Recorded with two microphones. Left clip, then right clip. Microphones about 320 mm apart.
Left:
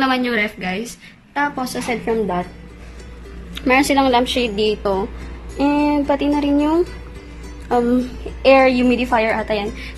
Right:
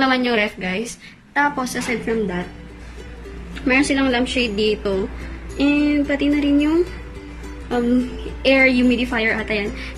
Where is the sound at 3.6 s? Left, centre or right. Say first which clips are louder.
Left 3 dB; centre.